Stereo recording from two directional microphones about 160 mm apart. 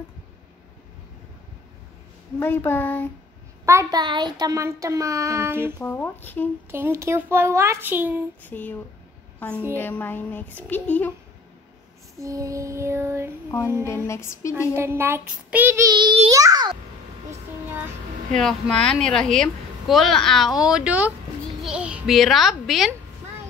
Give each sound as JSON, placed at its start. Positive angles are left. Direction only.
{"t": 2.3, "sound": "a child's voice", "side_deg": 15}
{"t": 3.6, "sound": "child singing", "side_deg": -20}
{"t": 5.8, "sound": "a child's voice", "side_deg": 15}
{"t": 6.7, "sound": "speech", "side_deg": -15}
{"t": 8.5, "sound": "a child's voice", "side_deg": 10}
{"t": 12.2, "sound": "child singing", "side_deg": -20}
{"t": 13.5, "sound": "a sound", "side_deg": 20}
{"t": 14.0, "sound": "a child's voice", "side_deg": 15}
{"t": 14.8, "sound": "speech", "side_deg": -15}
{"t": 15.9, "sound": "child singing", "side_deg": -30}
{"t": 18.4, "sound": "a woman's voice", "side_deg": 5}